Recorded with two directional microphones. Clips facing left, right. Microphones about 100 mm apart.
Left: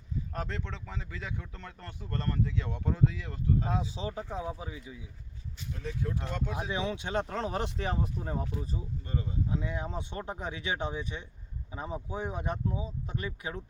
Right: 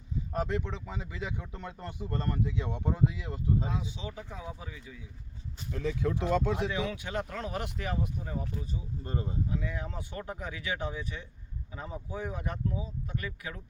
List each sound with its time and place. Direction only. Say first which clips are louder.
0.3 s speech: right 7 dB; 15° right (ahead or behind)
3.7 s speech: left 3 dB; 35° left (ahead or behind); by 5.0 s 20° left (ahead or behind)
5.7 s speech: right 5 dB; 90° right
6.7 s speech: left 1 dB; 25° left (ahead or behind); by 8.4 s 40° left (ahead or behind)
9.0 s speech: right 2 dB; 35° right (ahead or behind)
9.5 s speech: left 2 dB; 25° left (ahead or behind)